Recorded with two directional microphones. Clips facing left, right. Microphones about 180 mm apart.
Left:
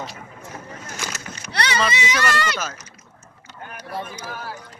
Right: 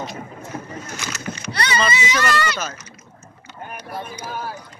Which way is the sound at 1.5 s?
70° left (ahead or behind).